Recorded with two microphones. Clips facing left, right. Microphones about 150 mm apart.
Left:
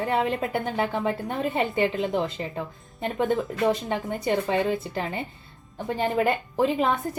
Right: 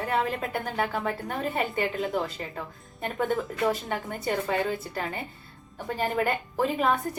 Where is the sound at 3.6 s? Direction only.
20° left (ahead or behind).